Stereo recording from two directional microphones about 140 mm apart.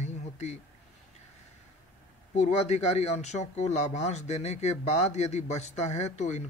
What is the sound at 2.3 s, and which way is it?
Speech, 55° left (ahead or behind).